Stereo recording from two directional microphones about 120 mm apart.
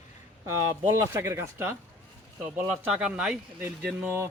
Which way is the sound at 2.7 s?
5° right (ahead or behind).